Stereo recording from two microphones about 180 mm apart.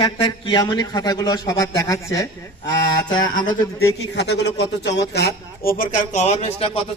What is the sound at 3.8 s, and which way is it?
A man's voice, 70° left (ahead or behind).